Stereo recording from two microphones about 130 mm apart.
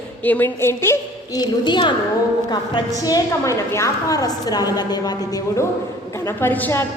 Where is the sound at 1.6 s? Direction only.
35° left (ahead or behind).